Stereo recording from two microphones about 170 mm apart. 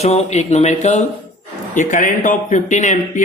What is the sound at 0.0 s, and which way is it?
Speech, 40° left (ahead or behind).